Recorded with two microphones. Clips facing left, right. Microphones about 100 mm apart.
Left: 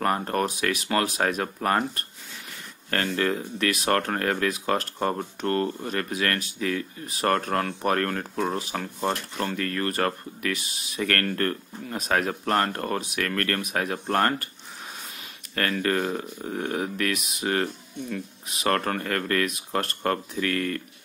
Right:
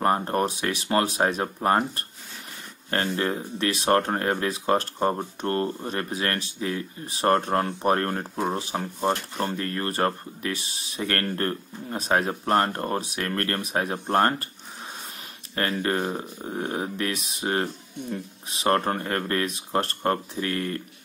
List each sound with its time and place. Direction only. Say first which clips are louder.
0.0 s speech: right 2 dB; 25° right (ahead or behind)
5.4 s speech: left 2 dB; 30° right (ahead or behind)
15.5 s speech: even; 25° right (ahead or behind)